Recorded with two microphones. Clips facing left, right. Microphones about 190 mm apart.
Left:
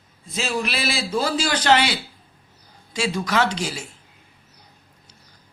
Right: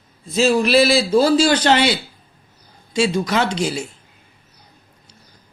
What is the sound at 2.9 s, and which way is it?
Speech, 25° right (ahead or behind).